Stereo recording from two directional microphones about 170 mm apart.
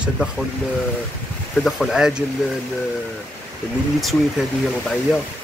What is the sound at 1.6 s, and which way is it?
Speech, centre (ahead or behind).